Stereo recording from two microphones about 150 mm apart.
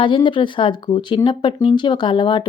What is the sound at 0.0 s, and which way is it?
A woman's voice, 35° left (ahead or behind).